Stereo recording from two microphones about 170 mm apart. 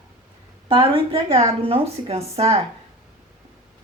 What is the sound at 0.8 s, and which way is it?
Speech, 30° right (ahead or behind).